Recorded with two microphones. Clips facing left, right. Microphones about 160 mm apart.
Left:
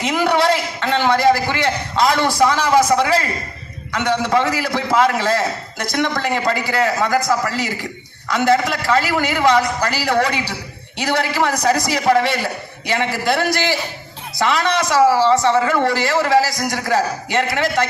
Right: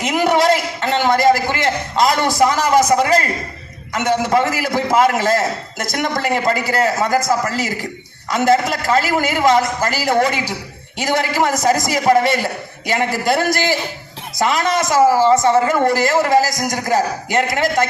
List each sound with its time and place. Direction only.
0.2 s a man's voice: 45° right (ahead or behind)